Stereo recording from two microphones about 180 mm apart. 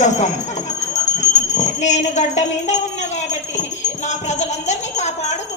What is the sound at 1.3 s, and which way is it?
Speech, 40° left (ahead or behind).